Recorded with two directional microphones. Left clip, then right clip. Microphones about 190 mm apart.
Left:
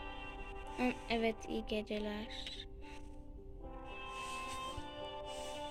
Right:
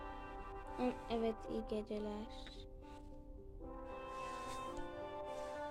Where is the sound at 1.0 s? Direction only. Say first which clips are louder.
Left 3 dB; 45° right (ahead or behind).